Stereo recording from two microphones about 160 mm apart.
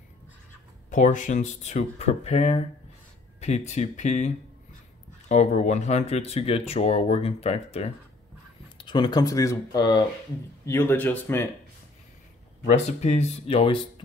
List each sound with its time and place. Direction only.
0.8 s speech: 50° left (ahead or behind)
5.3 s speech: 45° left (ahead or behind)
8.7 s speech: 30° left (ahead or behind)
10.6 s speech: 15° left (ahead or behind)
12.6 s speech: 45° left (ahead or behind)